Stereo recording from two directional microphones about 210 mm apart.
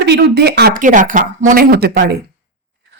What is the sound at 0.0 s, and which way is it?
A woman's voice, 50° right (ahead or behind).